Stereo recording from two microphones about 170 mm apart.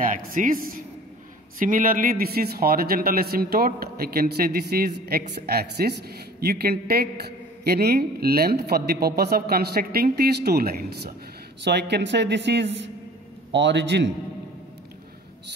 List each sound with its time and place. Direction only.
0.0 s a man's voice: 55° right (ahead or behind)
11.6 s a man's voice: 85° right